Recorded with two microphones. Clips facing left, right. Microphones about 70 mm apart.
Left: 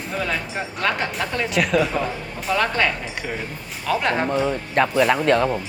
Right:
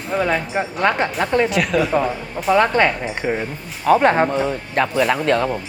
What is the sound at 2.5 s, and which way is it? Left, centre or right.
Speech, right.